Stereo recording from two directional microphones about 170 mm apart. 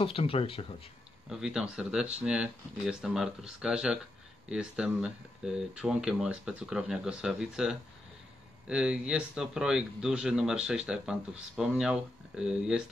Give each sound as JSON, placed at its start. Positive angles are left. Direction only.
{"t": 0.0, "sound": "speech", "side_deg": 35}
{"t": 1.3, "sound": "speech", "side_deg": -5}